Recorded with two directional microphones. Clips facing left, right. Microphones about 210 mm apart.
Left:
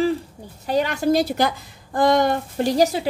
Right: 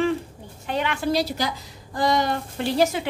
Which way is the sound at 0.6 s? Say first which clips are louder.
Left 5 dB; 40° left (ahead or behind).